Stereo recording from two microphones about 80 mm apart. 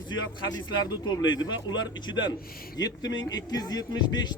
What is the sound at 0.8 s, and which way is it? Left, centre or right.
Speech, left.